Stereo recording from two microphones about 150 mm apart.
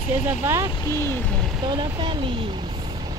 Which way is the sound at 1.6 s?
30° right (ahead or behind).